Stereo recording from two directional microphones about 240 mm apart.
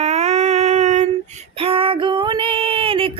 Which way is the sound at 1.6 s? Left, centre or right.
Right.